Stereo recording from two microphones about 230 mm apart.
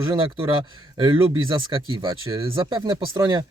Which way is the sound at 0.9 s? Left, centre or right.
Right.